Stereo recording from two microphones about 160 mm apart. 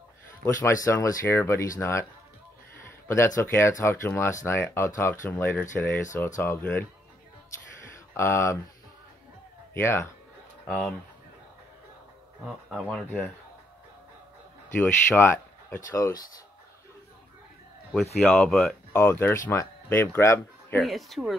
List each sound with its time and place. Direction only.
0.6 s speech: 20° left (ahead or behind)
3.1 s speech: 15° left (ahead or behind)
8.1 s speech: 15° left (ahead or behind)
9.8 s speech: 15° left (ahead or behind)
10.7 s speech: 5° left (ahead or behind)
12.4 s speech: centre (ahead or behind)
14.8 s speech: 15° left (ahead or behind)
18.3 s speech: centre (ahead or behind)
18.9 s speech: 15° left (ahead or behind)
20.8 s speech: centre (ahead or behind)